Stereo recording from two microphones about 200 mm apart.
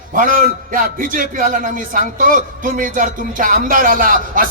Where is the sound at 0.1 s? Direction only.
40° right (ahead or behind).